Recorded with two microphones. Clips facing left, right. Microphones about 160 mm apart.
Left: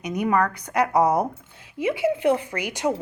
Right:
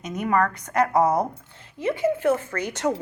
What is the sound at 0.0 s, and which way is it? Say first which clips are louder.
A woman's voice: left 1 dB; 10° left (ahead or behind).